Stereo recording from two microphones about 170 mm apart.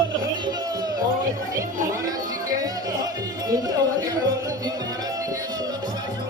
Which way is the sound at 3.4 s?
20° right (ahead or behind).